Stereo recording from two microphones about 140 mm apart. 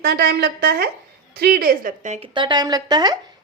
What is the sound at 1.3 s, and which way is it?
Speech, 90° right.